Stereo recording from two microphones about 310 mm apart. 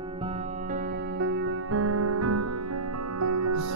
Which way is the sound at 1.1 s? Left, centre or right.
Right.